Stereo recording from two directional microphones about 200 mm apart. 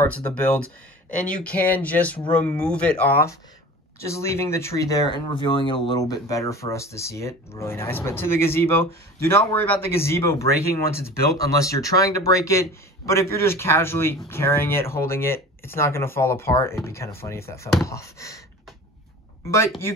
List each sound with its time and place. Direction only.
0.0 s speech: 10° left (ahead or behind)